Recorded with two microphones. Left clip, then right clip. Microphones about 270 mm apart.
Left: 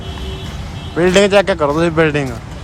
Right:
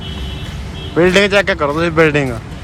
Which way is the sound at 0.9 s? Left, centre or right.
Centre.